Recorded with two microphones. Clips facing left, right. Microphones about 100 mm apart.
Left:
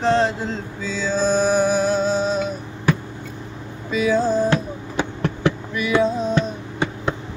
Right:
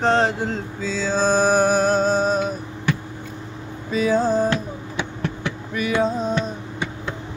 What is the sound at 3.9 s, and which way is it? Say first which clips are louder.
Speech: even; 45° right (ahead or behind).